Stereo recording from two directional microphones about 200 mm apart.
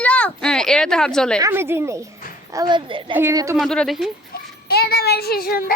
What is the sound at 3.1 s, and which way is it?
Speech, 15° right (ahead or behind).